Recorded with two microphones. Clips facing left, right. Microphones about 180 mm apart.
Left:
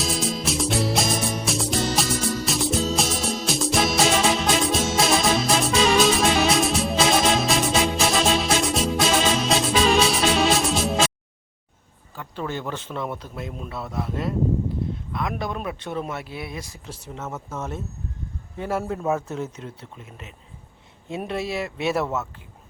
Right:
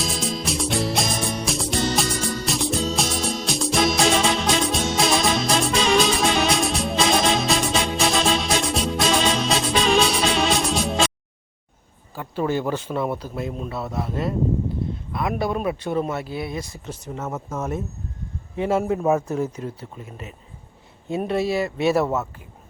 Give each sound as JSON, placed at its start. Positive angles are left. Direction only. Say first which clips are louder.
{"t": 0.0, "sound": "music", "louder": "left 1 dB", "side_deg": 0}
{"t": 12.2, "sound": "speech", "louder": "right 6 dB", "side_deg": -10}